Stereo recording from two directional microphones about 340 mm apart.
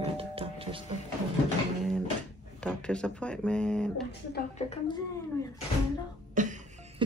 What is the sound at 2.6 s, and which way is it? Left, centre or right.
Speech, centre.